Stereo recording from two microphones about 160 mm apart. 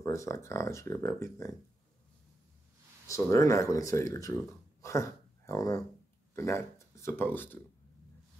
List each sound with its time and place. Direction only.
0.0 s speech: 20° left (ahead or behind)
3.1 s speech: 20° left (ahead or behind)